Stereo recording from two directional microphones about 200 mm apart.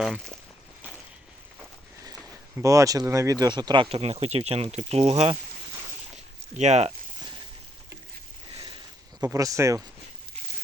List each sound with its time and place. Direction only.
0.0 s speech: centre (ahead or behind)
2.6 s speech: 15° right (ahead or behind)
6.6 s a sound: 35° right (ahead or behind)
9.2 s speech: 15° right (ahead or behind)